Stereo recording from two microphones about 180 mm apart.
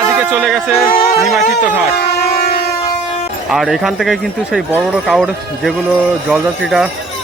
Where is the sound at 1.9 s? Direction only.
60° left (ahead or behind).